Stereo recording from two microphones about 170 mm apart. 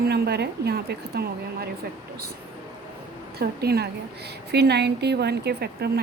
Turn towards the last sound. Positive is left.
turn(degrees=-70)  # may be behind; listen again after turning